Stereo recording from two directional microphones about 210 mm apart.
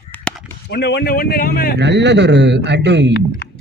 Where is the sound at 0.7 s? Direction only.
50° left (ahead or behind).